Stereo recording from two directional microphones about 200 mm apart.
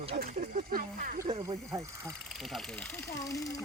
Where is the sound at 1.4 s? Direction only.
15° right (ahead or behind).